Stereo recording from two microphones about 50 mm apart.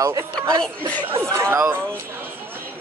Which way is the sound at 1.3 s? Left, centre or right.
Right.